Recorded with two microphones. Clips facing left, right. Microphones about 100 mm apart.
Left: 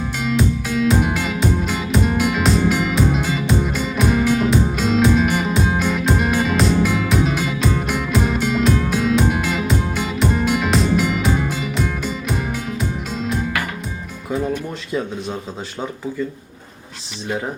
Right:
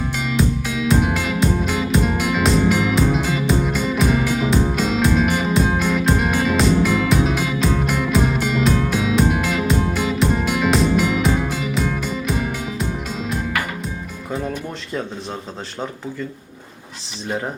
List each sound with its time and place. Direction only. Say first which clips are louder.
0.2 s music: left 2 dB; centre (ahead or behind)